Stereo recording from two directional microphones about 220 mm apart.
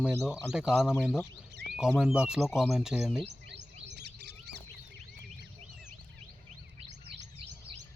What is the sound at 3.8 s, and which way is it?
Bird, 50° right (ahead or behind).